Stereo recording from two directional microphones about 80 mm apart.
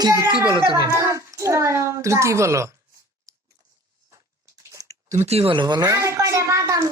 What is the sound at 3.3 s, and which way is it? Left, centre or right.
Chewing, right.